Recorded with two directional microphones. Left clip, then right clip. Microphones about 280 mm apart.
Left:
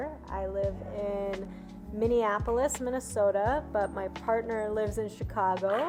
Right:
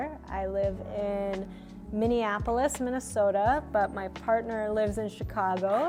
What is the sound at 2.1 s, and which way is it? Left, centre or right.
A woman's voice, right.